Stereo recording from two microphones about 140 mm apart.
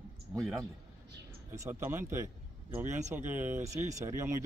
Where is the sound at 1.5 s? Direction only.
20° right (ahead or behind).